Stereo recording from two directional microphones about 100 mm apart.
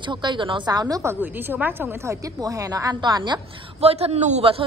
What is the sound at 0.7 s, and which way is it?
Speech, 40° right (ahead or behind).